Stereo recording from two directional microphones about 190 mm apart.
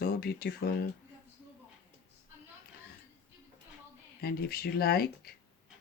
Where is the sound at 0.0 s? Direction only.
55° left (ahead or behind).